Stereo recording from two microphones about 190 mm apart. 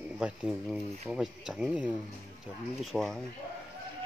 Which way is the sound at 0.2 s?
5° right (ahead or behind).